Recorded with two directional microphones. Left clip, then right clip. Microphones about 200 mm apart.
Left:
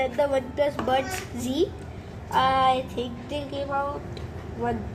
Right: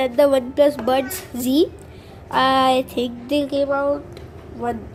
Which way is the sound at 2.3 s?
50° right (ahead or behind).